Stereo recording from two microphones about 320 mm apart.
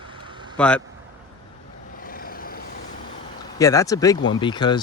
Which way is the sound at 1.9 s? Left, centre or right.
Left.